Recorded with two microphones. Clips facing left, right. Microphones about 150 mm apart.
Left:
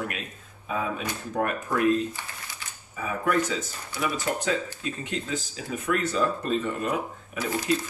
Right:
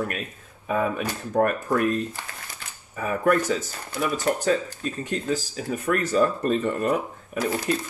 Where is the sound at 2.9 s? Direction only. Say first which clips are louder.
Right 4 dB; 55° right (ahead or behind).